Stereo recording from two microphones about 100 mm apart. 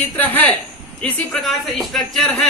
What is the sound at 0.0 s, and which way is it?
Speech, 15° left (ahead or behind).